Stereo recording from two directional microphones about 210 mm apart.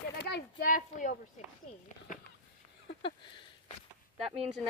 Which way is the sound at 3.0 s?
25° left (ahead or behind).